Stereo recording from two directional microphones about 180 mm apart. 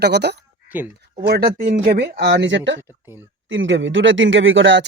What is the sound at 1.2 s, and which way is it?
Speech, 65° right (ahead or behind).